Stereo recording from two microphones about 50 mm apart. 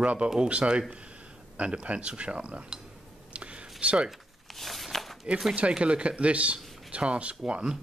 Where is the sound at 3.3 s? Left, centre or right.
Right.